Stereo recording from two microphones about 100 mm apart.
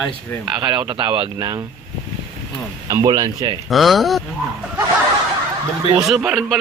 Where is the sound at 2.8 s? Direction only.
40° right (ahead or behind).